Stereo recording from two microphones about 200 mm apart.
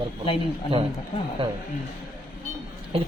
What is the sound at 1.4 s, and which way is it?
Speech, 25° right (ahead or behind).